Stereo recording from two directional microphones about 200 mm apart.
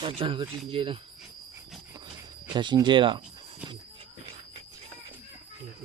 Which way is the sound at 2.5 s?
20° right (ahead or behind).